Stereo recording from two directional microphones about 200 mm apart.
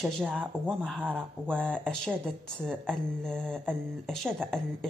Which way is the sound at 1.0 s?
10° right (ahead or behind).